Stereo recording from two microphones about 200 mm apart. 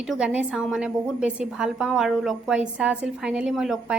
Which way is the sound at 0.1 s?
5° right (ahead or behind).